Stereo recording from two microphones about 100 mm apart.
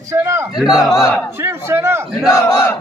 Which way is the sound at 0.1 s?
30° right (ahead or behind).